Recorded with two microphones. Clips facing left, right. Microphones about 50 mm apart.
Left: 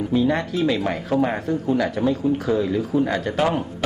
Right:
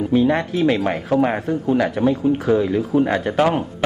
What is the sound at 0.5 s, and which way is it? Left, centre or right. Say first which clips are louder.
Speech: right 3 dB; right.